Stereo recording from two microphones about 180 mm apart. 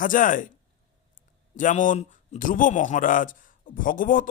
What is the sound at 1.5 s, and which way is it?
Speech, 45° left (ahead or behind).